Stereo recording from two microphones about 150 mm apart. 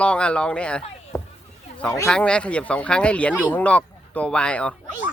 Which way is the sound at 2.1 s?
5° left (ahead or behind).